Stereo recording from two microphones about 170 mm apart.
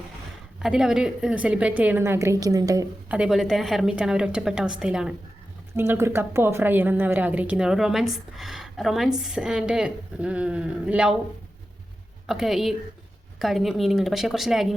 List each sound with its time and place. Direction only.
0.6 s a woman's voice: 5° right (ahead or behind); by 2.9 s 20° right (ahead or behind)
3.1 s a woman's voice: 5° right (ahead or behind)
12.2 s a woman's voice: centre (ahead or behind)